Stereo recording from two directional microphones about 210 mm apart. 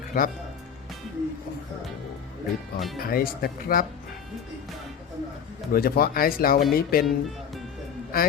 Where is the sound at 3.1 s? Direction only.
45° left (ahead or behind).